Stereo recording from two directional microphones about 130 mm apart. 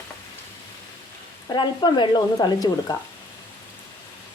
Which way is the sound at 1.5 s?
35° left (ahead or behind).